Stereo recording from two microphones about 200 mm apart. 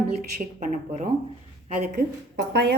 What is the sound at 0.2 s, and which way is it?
A woman's voice, 45° right (ahead or behind).